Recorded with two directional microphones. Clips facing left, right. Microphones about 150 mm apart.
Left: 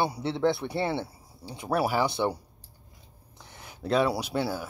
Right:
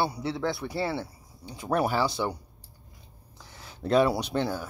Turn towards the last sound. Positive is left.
turn(degrees=10)  # may be behind; listen again after turning